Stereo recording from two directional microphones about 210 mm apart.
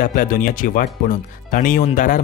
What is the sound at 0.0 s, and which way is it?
Speech, 40° left (ahead or behind).